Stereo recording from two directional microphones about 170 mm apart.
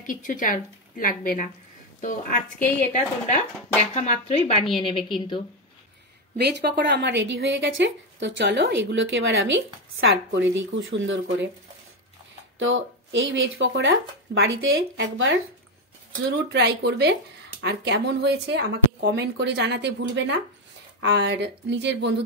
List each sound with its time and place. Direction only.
0.0 s a woman's voice: 50° left (ahead or behind); by 5.0 s 30° left (ahead or behind)
6.3 s a woman's voice: 70° right (ahead or behind); by 11.4 s 90° right
12.5 s a woman's voice: 90° right
16.3 s a woman's voice: 75° right (ahead or behind)